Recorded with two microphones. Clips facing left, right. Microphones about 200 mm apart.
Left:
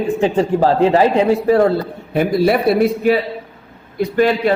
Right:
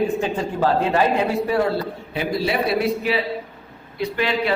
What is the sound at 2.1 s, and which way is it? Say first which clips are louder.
A man's voice: left 9 dB; 55° left (ahead or behind).